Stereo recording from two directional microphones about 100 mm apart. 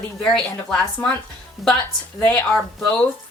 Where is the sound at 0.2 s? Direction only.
10° left (ahead or behind).